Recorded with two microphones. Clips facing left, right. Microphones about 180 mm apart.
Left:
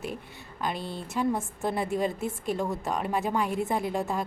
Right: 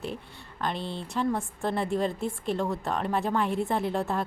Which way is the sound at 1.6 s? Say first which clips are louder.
Even; 15° left (ahead or behind).